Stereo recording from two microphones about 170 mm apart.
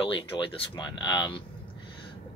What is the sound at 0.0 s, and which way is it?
Speech, 30° left (ahead or behind).